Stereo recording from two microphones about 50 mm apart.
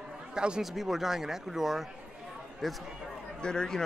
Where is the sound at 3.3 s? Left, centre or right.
Centre.